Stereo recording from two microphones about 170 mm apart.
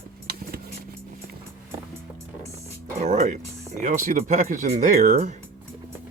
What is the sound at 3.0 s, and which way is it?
Speech, 40° right (ahead or behind).